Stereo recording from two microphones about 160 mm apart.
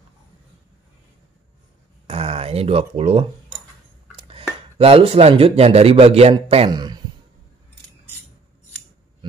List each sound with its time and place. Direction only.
2.0 s a man's voice: 35° right (ahead or behind)